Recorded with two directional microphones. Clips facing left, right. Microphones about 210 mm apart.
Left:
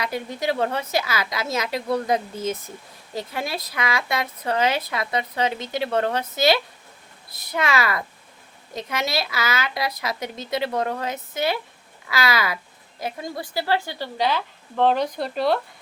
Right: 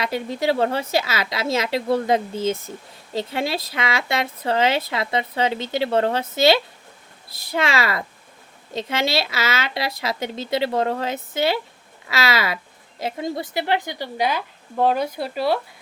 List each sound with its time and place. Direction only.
0.0 s a woman's voice: 30° right (ahead or behind); by 15.6 s 5° right (ahead or behind)